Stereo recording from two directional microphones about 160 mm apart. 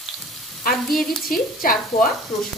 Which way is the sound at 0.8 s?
Centre (ahead or behind).